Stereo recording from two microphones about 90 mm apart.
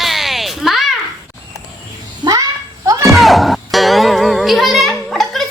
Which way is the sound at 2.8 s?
40° right (ahead or behind).